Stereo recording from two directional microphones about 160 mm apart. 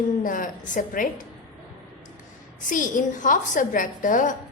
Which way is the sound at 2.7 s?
55° left (ahead or behind).